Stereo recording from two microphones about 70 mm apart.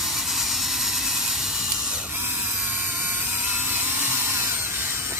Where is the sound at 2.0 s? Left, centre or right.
Right.